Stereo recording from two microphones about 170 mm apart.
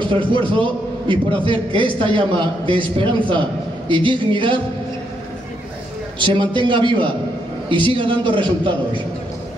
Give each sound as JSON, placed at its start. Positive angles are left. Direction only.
{"t": 0.0, "sound": "a man's voice", "side_deg": -30}
{"t": 6.1, "sound": "a man's voice", "side_deg": -25}